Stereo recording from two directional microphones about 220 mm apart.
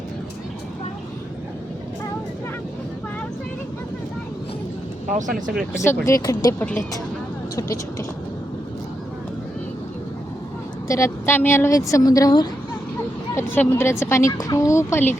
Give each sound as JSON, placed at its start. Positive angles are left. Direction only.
{"t": 5.1, "sound": "speech", "side_deg": -35}
{"t": 5.8, "sound": "a woman's voice", "side_deg": 10}
{"t": 10.8, "sound": "a woman's voice", "side_deg": 15}